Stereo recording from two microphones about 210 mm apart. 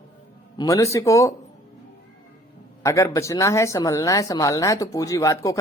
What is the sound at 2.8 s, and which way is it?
Speech, 15° left (ahead or behind).